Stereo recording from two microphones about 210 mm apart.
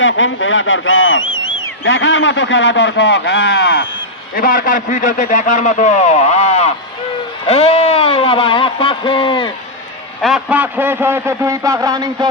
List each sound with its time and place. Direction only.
0.0 s a man's voice: 60° left (ahead or behind); by 9.5 s 25° left (ahead or behind)
10.2 s a man's voice: centre (ahead or behind); by 12.3 s 20° right (ahead or behind)